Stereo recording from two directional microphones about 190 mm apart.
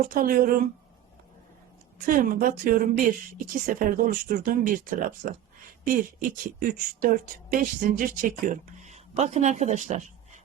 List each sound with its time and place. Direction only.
0.0 s speech: 45° right (ahead or behind)
2.0 s speech: 45° right (ahead or behind)